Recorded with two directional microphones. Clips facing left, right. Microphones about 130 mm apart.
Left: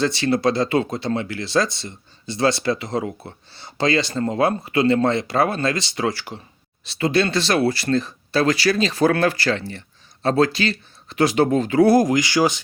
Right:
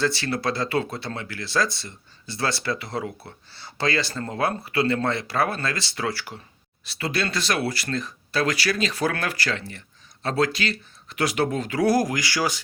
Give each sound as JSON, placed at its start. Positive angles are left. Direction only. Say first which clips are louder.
{"t": 0.0, "sound": "speech", "louder": "left 6 dB", "side_deg": 20}